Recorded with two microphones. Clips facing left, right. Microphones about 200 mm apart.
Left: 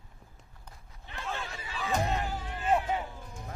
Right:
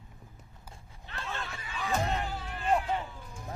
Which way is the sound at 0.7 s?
5° right (ahead or behind).